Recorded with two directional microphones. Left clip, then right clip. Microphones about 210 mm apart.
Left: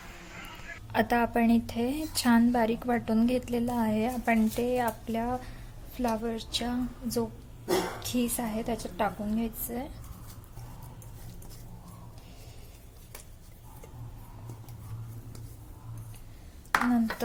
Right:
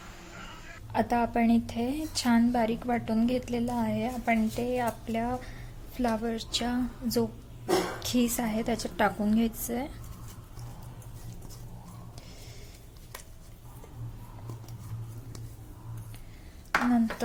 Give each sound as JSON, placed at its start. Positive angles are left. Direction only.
{"t": 0.9, "sound": "a woman's voice", "side_deg": 5}